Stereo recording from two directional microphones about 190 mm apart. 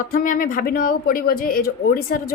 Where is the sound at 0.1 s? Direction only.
45° left (ahead or behind).